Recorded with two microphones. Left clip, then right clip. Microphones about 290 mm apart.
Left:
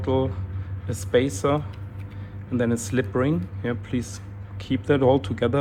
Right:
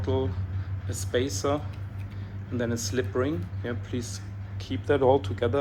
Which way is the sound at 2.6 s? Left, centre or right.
Left.